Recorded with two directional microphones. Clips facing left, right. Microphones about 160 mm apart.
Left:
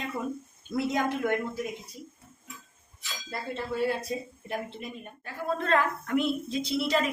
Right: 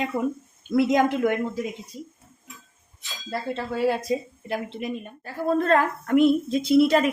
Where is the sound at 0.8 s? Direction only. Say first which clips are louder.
Right 8 dB; 90° right.